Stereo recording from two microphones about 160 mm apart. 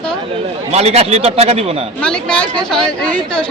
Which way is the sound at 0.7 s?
40° right (ahead or behind).